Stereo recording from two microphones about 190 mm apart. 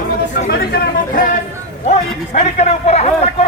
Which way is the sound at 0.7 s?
45° left (ahead or behind).